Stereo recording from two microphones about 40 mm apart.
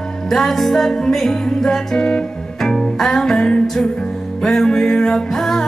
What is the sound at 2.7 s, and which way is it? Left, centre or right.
Music, centre.